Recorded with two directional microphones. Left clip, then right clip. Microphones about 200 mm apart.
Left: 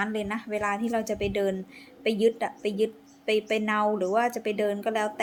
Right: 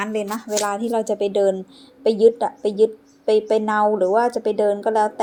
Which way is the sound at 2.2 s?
15° left (ahead or behind).